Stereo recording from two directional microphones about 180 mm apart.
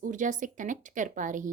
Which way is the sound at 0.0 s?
45° right (ahead or behind).